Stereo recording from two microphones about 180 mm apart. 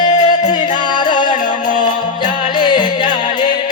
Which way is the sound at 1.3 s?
45° left (ahead or behind).